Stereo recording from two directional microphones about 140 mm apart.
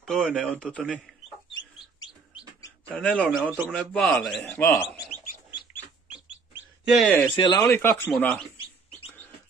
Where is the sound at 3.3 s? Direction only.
10° right (ahead or behind).